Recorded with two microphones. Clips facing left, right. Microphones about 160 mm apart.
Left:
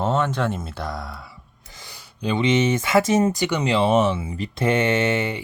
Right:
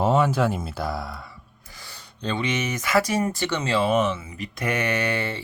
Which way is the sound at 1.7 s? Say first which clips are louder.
Left 1 dB; 20° left (ahead or behind).